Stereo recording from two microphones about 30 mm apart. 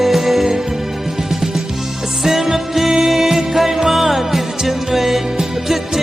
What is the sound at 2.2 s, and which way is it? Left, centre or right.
Music, centre.